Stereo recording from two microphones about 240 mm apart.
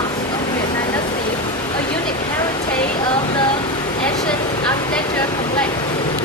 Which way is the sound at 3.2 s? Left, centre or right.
Left.